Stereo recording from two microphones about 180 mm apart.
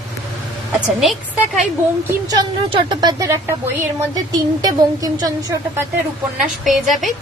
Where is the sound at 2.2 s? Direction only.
20° right (ahead or behind).